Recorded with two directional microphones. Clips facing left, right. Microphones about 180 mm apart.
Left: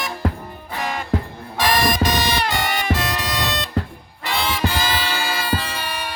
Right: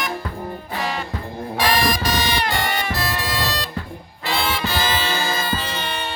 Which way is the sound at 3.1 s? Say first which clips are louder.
Even; 20° left (ahead or behind).